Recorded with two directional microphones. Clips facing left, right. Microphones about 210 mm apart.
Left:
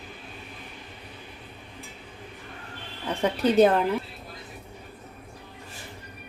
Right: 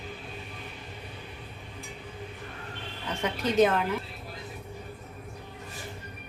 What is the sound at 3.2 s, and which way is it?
Speech, 35° left (ahead or behind).